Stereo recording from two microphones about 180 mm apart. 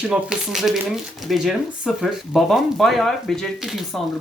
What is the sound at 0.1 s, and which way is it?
Speech, 5° right (ahead or behind).